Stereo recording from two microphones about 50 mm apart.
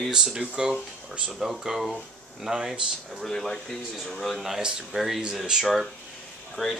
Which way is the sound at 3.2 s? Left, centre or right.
Centre.